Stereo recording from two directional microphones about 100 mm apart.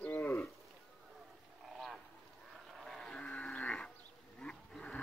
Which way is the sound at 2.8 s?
5° left (ahead or behind).